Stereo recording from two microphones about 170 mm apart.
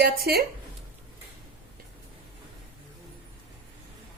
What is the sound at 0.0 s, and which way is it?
Speech, 65° right (ahead or behind).